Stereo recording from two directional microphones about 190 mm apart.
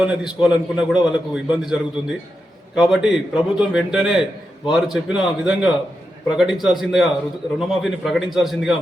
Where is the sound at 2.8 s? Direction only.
5° right (ahead or behind).